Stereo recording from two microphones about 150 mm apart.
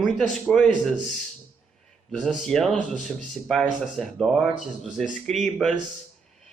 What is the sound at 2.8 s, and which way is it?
Speech, 55° left (ahead or behind).